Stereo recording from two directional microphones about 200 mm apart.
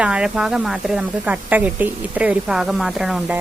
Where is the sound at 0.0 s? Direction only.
5° right (ahead or behind).